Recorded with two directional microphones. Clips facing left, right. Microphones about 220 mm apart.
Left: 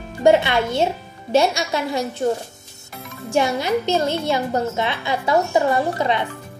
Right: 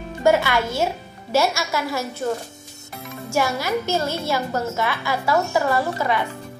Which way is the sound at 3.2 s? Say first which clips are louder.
Left 3 dB; 25° left (ahead or behind).